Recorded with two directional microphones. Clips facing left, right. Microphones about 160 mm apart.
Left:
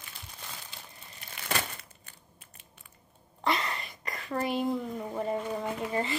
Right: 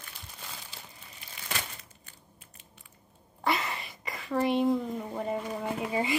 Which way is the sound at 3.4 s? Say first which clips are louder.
Even; centre (ahead or behind).